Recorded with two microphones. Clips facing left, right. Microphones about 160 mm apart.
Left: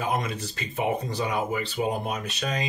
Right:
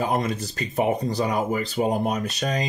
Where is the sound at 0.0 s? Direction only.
35° right (ahead or behind).